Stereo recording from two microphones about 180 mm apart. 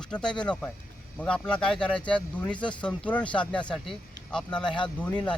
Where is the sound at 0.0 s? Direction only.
5° left (ahead or behind).